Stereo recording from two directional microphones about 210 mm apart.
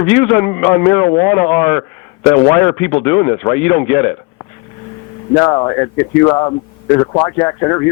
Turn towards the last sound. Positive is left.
turn(degrees=15)  # may be behind; listen again after turning